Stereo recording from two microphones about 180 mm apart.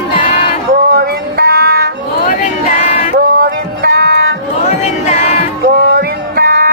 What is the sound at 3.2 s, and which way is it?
Music, 55° right (ahead or behind).